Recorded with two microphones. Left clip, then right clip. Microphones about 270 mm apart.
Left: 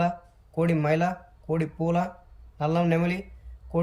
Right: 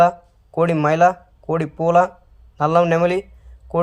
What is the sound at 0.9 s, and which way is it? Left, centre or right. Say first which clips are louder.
Speech: right 13 dB; centre.